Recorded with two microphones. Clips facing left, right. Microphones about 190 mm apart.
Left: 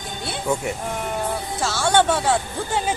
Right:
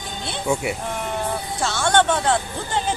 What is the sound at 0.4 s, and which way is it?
Speech, 10° right (ahead or behind).